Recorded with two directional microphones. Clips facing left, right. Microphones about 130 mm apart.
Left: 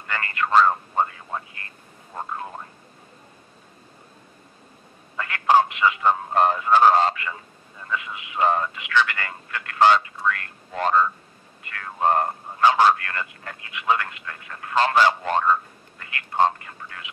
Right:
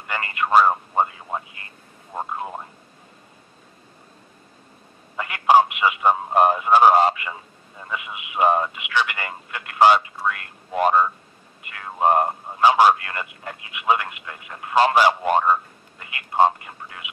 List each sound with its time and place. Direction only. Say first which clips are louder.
0.0 s speech: right 1 dB; 20° right (ahead or behind)
5.1 s speech: right 2 dB; 15° right (ahead or behind)